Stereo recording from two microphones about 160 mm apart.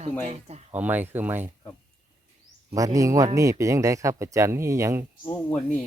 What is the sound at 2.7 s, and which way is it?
Speech, 20° right (ahead or behind).